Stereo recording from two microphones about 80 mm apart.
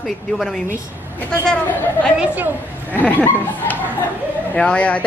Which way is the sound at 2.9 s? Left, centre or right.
Left.